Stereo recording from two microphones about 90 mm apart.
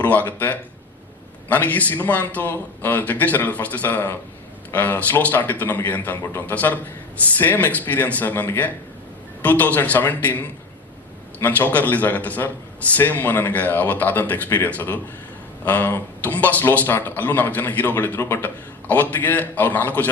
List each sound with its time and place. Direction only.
0.0 s a man's voice: 20° left (ahead or behind)